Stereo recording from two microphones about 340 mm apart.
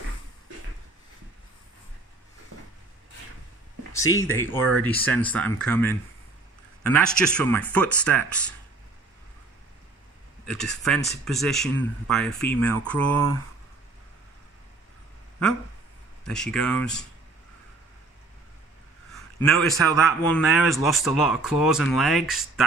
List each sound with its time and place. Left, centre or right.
4.2 s speech: centre
10.4 s speech: centre
16.3 s speech: centre
19.1 s a sound: centre
20.2 s speech: centre